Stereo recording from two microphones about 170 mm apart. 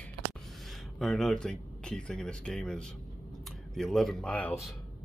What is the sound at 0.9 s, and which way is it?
Speech, centre (ahead or behind).